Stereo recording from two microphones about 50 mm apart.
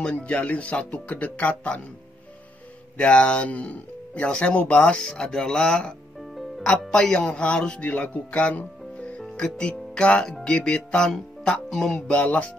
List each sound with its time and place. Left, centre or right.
0.0 s speech: left
3.0 s speech: centre
7.8 s speech: left